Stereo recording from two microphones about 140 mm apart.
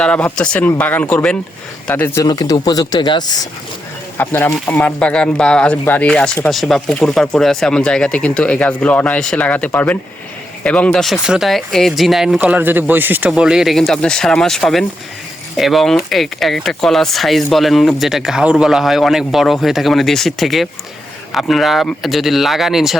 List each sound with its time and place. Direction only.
0.0 s speech: 10° left (ahead or behind)
2.2 s speech: 30° left (ahead or behind)
4.2 s speech: 15° left (ahead or behind); by 23.0 s centre (ahead or behind)